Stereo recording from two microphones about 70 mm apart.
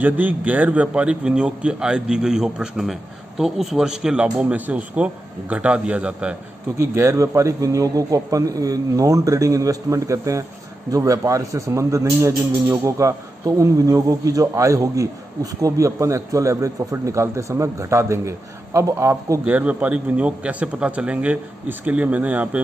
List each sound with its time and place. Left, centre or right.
0.0 s a man's voice: right
6.8 s a man's voice: right
19.4 s a man's voice: centre